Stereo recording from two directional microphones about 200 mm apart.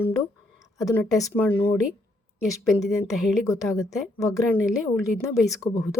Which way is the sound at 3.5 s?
15° left (ahead or behind).